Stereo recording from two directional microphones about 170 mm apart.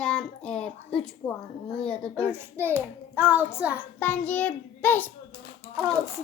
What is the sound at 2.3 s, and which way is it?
A child's voice, 15° right (ahead or behind).